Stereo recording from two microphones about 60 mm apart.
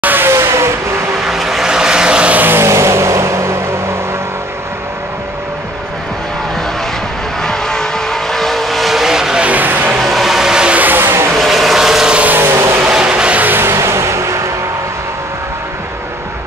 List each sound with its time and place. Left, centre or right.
0.0 s vehicle: right
0.3 s vehicle: right
1.2 s vehicle: centre
2.4 s vehicle: right
7.4 s vehicle: centre
9.5 s a sound: right
10.0 s a sound: centre
10.8 s vehicle: right
11.3 s vehicle: centre
12.1 s vehicle: right
12.4 s vehicle: right
13.0 s music: centre
13.4 s music: right